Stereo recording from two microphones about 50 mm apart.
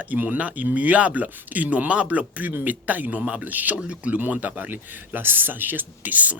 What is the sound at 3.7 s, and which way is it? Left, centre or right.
Speech, right.